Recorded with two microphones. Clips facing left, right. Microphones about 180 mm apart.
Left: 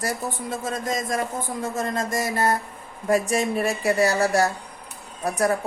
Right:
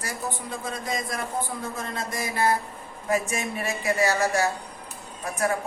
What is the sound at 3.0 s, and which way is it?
A woman's voice, 40° left (ahead or behind).